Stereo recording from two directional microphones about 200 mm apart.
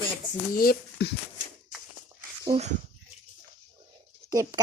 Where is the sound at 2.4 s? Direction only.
30° right (ahead or behind).